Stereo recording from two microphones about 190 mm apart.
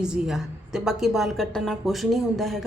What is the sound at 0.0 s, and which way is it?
Speech, 5° right (ahead or behind).